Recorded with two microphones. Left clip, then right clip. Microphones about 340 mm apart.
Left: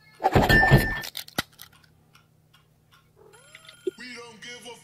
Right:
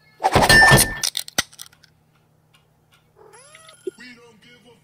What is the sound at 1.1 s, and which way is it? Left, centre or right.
Chink, centre.